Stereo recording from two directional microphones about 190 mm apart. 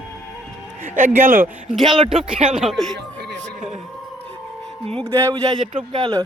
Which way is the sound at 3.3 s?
Centre (ahead or behind).